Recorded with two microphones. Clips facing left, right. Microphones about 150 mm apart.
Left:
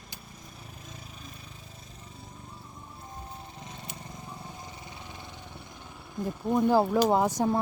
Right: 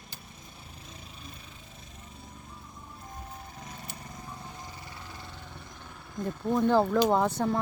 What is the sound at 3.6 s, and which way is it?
Vehicle, 25° left (ahead or behind).